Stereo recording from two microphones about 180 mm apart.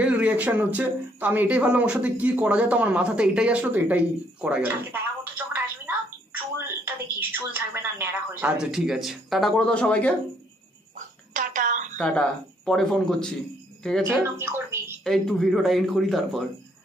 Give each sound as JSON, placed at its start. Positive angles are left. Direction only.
{"t": 0.0, "sound": "speech", "side_deg": -5}
{"t": 11.0, "sound": "a sound", "side_deg": -45}
{"t": 12.0, "sound": "a man's voice", "side_deg": 5}
{"t": 14.0, "sound": "speech", "side_deg": -15}
{"t": 15.0, "sound": "a man's voice", "side_deg": 0}